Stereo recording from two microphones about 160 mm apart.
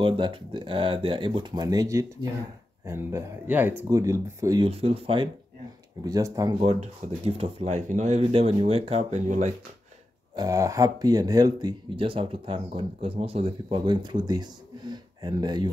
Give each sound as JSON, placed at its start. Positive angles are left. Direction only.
{"t": 0.0, "sound": "speech", "side_deg": -30}
{"t": 4.6, "sound": "speech", "side_deg": -40}
{"t": 6.0, "sound": "speech", "side_deg": -20}
{"t": 6.6, "sound": "speech", "side_deg": -40}
{"t": 8.2, "sound": "speech", "side_deg": -35}
{"t": 10.3, "sound": "speech", "side_deg": -20}